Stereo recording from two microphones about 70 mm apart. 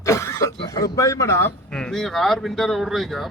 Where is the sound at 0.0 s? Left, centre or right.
Left.